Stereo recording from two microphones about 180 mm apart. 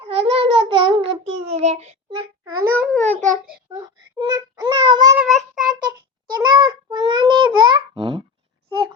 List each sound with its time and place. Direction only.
0.0 s a sound: 30° right (ahead or behind)
2.4 s a sound: 10° right (ahead or behind)
3.0 s child singing: 40° right (ahead or behind)
3.8 s child singing: 20° right (ahead or behind)
5.1 s child singing: 5° right (ahead or behind)
6.3 s babbling: 25° right (ahead or behind)